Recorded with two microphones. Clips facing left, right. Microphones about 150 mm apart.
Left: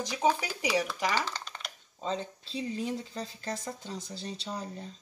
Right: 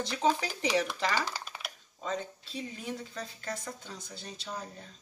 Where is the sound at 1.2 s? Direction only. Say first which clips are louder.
Even; 5° right (ahead or behind).